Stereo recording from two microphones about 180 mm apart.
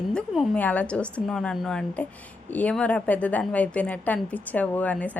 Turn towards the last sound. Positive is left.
turn(degrees=10)  # may be behind; listen again after turning